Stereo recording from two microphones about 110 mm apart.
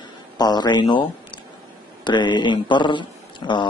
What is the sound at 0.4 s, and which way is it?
Speech, 40° left (ahead or behind).